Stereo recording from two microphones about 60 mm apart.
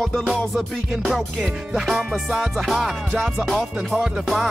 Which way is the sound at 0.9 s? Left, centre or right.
Centre.